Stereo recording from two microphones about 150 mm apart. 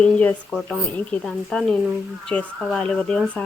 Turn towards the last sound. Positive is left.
turn(degrees=5)  # may be behind; listen again after turning